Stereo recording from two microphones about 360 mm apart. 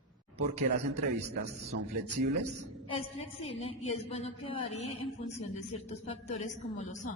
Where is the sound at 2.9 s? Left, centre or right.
Centre.